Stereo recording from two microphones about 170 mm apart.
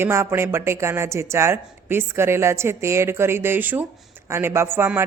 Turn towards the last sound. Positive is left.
turn(degrees=-15)  # may be behind; listen again after turning